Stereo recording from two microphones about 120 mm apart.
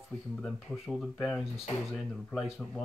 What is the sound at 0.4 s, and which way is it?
Speech, 5° left (ahead or behind).